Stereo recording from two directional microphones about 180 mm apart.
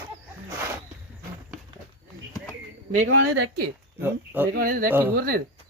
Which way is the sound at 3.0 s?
90° right.